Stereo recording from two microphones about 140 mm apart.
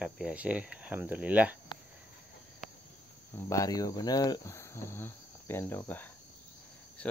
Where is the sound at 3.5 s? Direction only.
25° left (ahead or behind).